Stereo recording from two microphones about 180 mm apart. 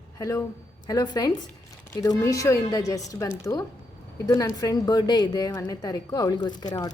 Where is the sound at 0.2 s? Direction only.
15° left (ahead or behind).